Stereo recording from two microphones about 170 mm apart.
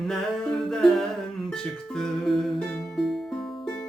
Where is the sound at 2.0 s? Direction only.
Centre (ahead or behind).